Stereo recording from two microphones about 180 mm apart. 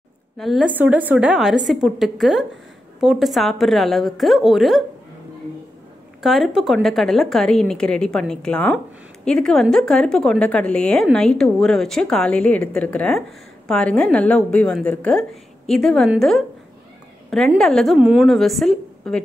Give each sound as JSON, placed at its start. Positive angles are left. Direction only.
{"t": 0.4, "sound": "a woman's voice", "side_deg": 0}
{"t": 6.2, "sound": "a woman's voice", "side_deg": 0}